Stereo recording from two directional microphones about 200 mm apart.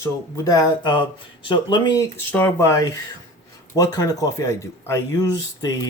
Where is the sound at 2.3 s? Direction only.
10° left (ahead or behind).